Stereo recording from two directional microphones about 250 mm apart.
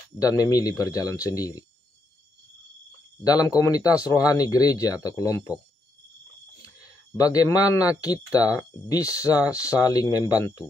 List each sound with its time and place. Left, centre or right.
0.2 s speech: centre
3.3 s speech: centre
7.2 s speech: centre